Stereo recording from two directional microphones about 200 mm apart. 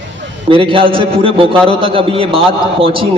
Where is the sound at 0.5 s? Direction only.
25° right (ahead or behind).